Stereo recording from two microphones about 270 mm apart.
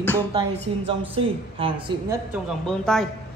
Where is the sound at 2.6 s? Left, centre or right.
Centre.